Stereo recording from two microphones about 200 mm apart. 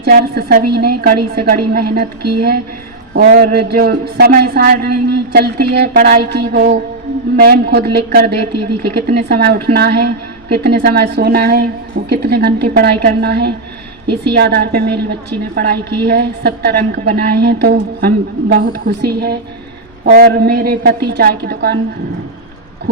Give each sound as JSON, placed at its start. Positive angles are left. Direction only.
{"t": 0.0, "sound": "a woman's voice", "side_deg": -50}